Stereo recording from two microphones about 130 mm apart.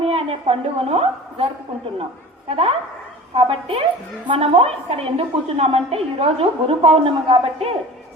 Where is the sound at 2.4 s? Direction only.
45° right (ahead or behind).